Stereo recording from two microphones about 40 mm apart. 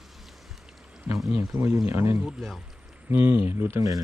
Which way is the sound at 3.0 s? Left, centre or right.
Right.